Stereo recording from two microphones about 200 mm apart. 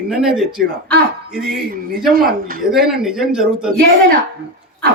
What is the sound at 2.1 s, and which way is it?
Speech, 50° right (ahead or behind).